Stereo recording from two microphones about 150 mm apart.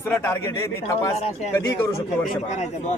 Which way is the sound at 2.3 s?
50° left (ahead or behind).